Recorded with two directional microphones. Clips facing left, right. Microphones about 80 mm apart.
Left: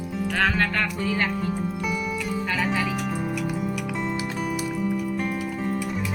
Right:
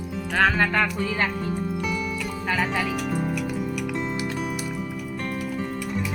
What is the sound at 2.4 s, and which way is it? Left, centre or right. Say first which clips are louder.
Speech: right 2 dB; centre.